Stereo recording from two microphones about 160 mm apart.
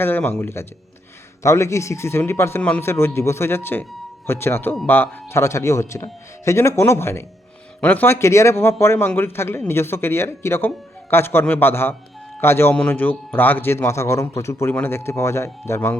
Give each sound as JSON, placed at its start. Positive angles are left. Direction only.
{"t": 0.0, "sound": "a man's voice", "side_deg": 10}